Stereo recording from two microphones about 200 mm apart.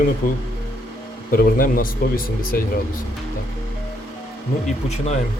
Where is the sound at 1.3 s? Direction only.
45° left (ahead or behind).